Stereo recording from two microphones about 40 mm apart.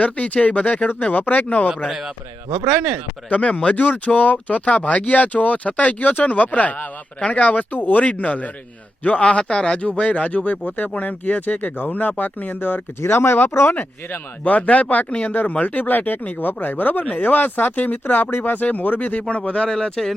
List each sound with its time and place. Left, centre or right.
0.0 s speech: left
1.9 s a man's voice: centre
2.6 s speech: right
3.2 s speech: left
7.7 s speech: left
8.0 s speech: left
13.1 s speech: left
14.4 s speech: left
18.0 s speech: left
18.6 s speech: left
19.3 s speech: left
19.7 s speech: centre